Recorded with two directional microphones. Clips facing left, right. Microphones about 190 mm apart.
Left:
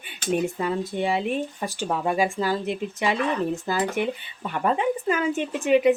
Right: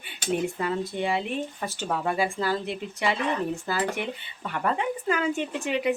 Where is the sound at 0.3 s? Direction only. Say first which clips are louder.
Left 3 dB; 15° left (ahead or behind).